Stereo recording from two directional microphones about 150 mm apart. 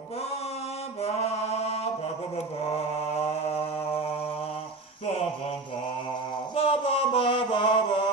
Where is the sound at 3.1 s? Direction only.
45° left (ahead or behind).